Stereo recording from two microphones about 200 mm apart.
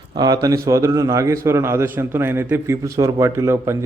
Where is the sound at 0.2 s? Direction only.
20° right (ahead or behind).